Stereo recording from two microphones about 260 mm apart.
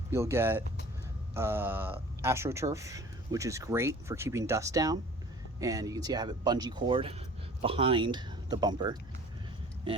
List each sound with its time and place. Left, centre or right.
0.1 s speech: centre